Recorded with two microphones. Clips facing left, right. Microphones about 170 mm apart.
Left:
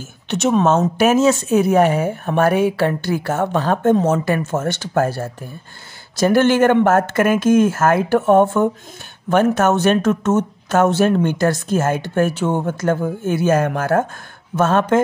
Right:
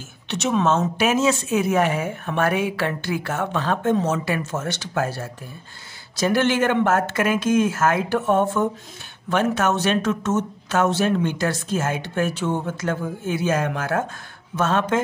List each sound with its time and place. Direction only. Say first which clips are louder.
0.3 s speech: left 5 dB; 45° left (ahead or behind)